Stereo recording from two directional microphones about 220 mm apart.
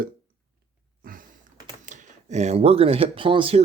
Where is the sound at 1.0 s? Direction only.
40° right (ahead or behind).